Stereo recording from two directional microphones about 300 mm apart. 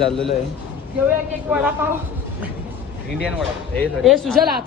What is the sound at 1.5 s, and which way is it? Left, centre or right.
Speech, centre.